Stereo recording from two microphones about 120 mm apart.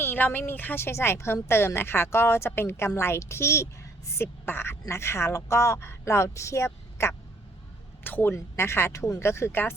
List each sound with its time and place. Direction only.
0.0 s a woman's voice: 15° left (ahead or behind)